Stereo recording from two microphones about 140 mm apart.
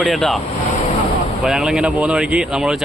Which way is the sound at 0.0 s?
Centre (ahead or behind).